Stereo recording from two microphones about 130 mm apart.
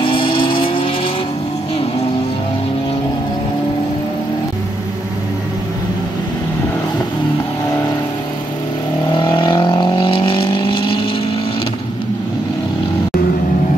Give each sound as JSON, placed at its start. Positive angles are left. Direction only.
{"t": 0.0, "sound": "vehicle", "side_deg": 40}
{"t": 9.1, "sound": "vehicle", "side_deg": 40}